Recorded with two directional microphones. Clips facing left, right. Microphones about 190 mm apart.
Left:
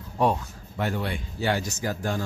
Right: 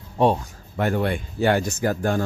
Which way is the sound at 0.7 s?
55° right (ahead or behind).